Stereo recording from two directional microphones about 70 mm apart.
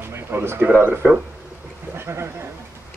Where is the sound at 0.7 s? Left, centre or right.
Right.